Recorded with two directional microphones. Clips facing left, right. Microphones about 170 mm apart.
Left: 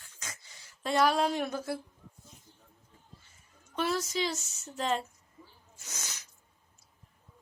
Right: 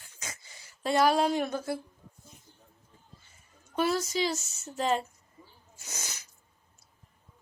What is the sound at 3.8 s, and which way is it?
Speech, 5° right (ahead or behind).